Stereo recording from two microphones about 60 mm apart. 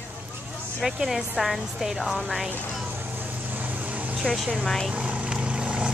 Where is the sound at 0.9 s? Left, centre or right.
Centre.